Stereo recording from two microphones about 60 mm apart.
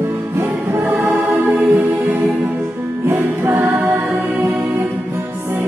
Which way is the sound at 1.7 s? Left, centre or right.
Centre.